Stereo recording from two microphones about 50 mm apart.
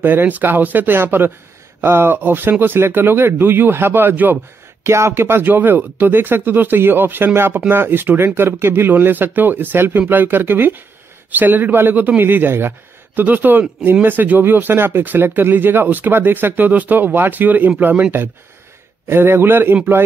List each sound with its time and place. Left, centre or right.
0.0 s speech: right
4.8 s speech: right
19.0 s speech: right